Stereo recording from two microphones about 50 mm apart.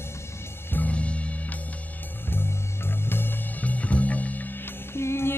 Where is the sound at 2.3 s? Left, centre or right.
Left.